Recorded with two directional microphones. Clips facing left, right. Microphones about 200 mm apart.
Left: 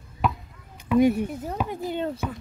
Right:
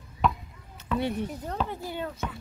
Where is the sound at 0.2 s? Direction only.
Centre (ahead or behind).